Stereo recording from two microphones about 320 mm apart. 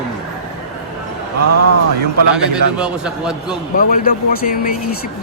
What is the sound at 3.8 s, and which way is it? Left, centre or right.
Speech, left.